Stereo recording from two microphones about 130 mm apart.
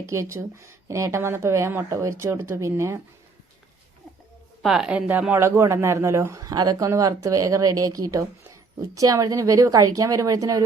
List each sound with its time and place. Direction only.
0.0 s speech: 20° right (ahead or behind)
4.6 s speech: 5° right (ahead or behind); by 10.6 s 25° right (ahead or behind)